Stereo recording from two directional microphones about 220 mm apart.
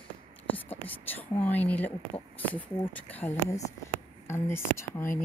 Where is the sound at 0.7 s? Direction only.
10° left (ahead or behind).